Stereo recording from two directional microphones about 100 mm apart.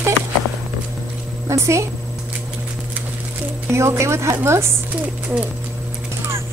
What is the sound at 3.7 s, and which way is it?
Speech, 30° right (ahead or behind).